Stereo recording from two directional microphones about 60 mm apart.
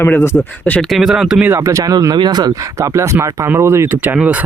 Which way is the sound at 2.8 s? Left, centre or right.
Right.